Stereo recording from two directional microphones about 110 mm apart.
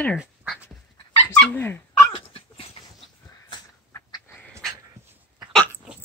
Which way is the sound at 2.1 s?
55° left (ahead or behind).